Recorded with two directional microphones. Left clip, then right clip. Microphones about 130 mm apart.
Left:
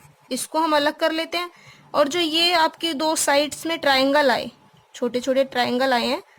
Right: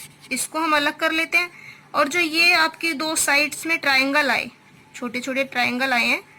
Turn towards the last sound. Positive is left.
turn(degrees=90)